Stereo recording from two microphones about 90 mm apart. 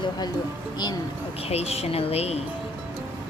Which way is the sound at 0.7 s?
50° left (ahead or behind).